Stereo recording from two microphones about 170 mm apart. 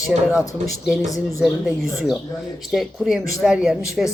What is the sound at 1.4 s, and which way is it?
Speech, centre (ahead or behind).